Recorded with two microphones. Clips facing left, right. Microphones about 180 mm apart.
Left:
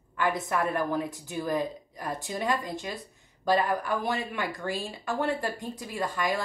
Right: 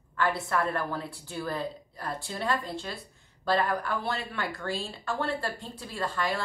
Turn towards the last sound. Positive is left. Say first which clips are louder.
# left 2 dB
turn(degrees=15)  # may be behind; listen again after turning